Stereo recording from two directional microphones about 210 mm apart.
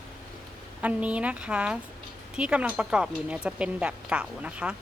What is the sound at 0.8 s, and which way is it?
A woman's voice, 5° right (ahead or behind).